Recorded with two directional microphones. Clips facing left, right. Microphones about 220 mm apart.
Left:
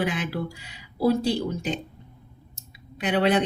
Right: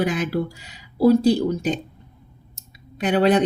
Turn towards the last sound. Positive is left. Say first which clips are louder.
# right 4 dB
turn(degrees=-40)  # may be behind; listen again after turning